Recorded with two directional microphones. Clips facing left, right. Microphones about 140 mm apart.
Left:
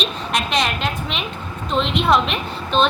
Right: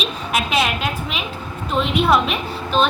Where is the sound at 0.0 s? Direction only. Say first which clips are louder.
Even; 5° right (ahead or behind).